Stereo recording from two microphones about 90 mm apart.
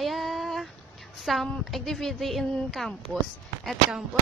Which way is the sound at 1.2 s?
Centre (ahead or behind).